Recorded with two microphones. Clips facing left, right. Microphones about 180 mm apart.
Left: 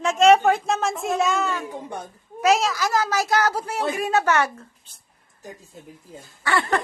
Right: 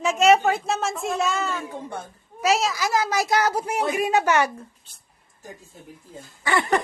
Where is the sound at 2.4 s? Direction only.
5° right (ahead or behind).